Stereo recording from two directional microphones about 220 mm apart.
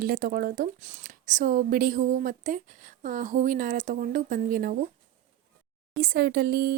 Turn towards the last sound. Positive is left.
turn(degrees=-45)  # may be behind; listen again after turning